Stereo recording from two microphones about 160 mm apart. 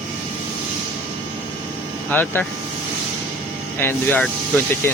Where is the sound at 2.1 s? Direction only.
10° left (ahead or behind).